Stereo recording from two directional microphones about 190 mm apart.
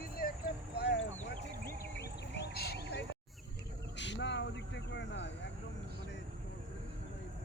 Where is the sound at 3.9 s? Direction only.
70° left (ahead or behind).